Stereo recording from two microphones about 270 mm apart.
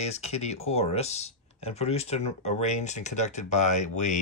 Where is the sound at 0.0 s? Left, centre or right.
Left.